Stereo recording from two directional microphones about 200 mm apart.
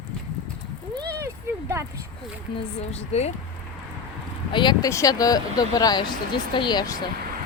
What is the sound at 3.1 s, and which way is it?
Speech, 30° left (ahead or behind).